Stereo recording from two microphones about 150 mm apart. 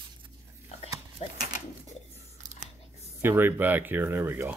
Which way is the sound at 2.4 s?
55° right (ahead or behind).